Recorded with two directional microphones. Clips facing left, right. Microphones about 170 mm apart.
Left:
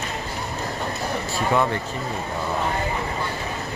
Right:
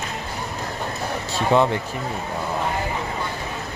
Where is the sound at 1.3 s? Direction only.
20° right (ahead or behind).